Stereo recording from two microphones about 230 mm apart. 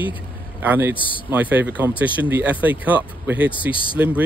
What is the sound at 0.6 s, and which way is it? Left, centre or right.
Speech, centre.